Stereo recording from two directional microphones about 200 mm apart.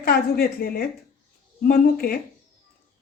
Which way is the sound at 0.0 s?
50° left (ahead or behind).